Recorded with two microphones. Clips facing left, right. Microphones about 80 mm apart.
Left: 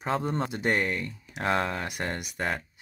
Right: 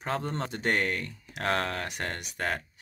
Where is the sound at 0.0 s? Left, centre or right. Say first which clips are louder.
Left 3 dB; centre.